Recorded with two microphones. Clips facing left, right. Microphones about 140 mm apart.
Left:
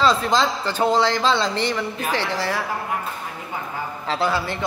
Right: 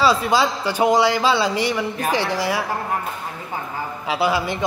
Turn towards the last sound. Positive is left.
turn(degrees=-10)  # may be behind; listen again after turning